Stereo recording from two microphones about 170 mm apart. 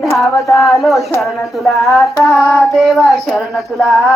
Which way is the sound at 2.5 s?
Centre (ahead or behind).